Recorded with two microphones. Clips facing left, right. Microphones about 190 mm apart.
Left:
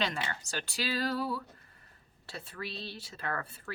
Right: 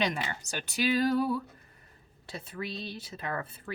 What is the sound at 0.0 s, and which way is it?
A woman's voice, 20° right (ahead or behind).